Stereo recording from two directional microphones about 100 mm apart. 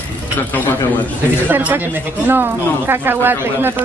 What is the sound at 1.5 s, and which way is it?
Speech, 20° right (ahead or behind).